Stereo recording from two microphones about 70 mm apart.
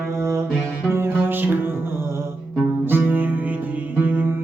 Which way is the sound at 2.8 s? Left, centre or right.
Right.